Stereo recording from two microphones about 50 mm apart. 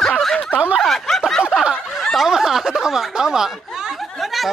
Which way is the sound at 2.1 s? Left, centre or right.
Centre.